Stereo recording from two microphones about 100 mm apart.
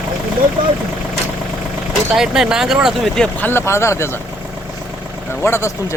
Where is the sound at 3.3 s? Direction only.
20° left (ahead or behind).